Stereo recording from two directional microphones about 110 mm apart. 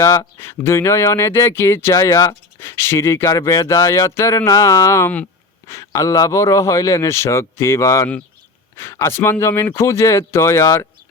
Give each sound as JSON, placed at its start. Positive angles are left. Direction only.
{"t": 0.0, "sound": "speech", "side_deg": 30}